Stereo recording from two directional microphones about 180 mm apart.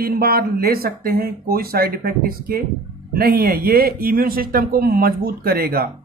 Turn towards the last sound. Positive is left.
turn(degrees=-55)  # may be behind; listen again after turning